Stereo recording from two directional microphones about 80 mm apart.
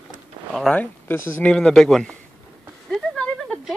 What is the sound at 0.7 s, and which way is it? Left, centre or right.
Speech, left.